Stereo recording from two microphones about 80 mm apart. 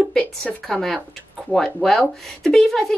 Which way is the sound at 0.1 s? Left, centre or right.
Centre.